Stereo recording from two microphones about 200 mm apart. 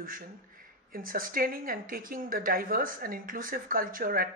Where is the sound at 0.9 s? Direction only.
45° right (ahead or behind).